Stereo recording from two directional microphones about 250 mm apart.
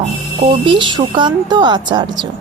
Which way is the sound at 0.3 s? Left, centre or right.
Right.